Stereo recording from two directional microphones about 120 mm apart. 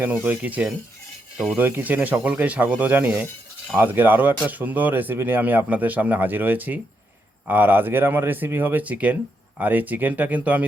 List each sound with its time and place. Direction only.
0.0 s speech: 15° right (ahead or behind)